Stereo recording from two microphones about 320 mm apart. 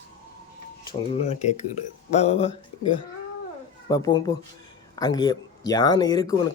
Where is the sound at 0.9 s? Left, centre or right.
Centre.